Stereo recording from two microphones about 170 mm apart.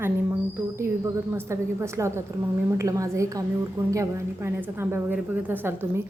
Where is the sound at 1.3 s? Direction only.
15° right (ahead or behind).